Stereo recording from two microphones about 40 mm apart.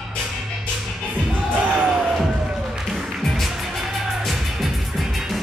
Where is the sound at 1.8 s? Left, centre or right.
Right.